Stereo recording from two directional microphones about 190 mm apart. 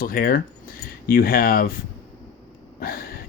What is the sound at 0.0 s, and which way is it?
Speech, 50° left (ahead or behind).